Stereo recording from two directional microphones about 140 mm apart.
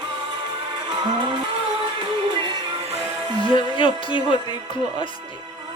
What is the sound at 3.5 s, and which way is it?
Music, 35° left (ahead or behind).